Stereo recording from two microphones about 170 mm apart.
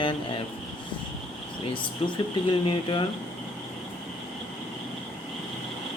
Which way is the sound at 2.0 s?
35° left (ahead or behind).